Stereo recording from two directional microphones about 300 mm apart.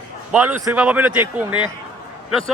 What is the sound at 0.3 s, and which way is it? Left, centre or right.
Speech, centre.